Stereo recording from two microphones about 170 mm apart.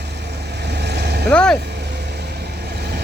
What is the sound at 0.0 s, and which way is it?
Vehicle, 80° right.